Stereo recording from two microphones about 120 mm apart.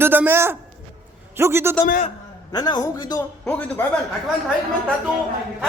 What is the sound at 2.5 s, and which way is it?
Speech, 35° left (ahead or behind).